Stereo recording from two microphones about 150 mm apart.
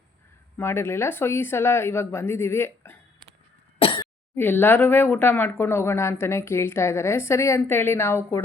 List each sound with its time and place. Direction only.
0.5 s speech: 15° left (ahead or behind)
3.8 s cough: 35° left (ahead or behind)
4.4 s speech: 15° left (ahead or behind)